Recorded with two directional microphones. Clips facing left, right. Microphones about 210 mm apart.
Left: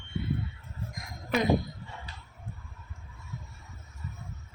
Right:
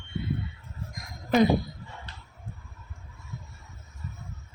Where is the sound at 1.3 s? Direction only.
35° right (ahead or behind).